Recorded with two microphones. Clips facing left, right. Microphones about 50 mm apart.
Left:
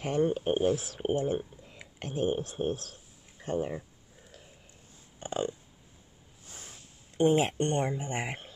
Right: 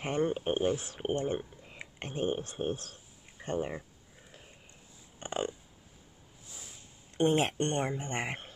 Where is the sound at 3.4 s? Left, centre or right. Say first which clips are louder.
Left 2 dB; right.